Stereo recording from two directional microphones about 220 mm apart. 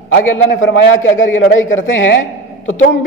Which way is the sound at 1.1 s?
60° left (ahead or behind).